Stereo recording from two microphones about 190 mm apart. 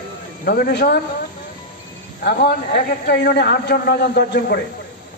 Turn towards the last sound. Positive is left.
turn(degrees=55)  # may be behind; listen again after turning